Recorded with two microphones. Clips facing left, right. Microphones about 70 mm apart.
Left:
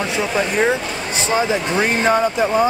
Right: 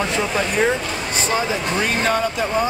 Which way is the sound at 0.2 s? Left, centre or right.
Centre.